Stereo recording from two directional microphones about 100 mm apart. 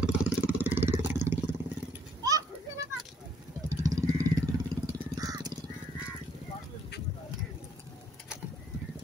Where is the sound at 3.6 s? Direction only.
35° right (ahead or behind).